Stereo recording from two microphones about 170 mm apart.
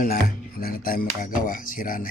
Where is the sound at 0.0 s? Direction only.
60° left (ahead or behind).